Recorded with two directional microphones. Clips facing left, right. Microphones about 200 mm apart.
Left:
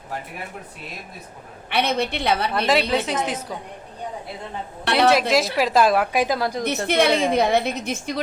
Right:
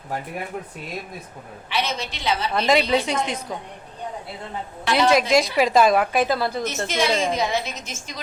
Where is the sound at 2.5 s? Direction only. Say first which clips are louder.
Right 5 dB; centre (ahead or behind).